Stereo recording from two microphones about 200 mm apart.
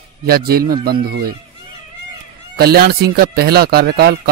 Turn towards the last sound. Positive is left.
turn(degrees=-55)  # may be behind; listen again after turning